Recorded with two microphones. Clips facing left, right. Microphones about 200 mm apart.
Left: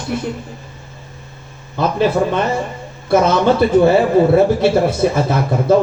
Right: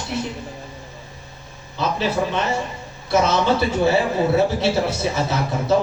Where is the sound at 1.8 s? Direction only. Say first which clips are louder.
Left 6 dB; 50° left (ahead or behind).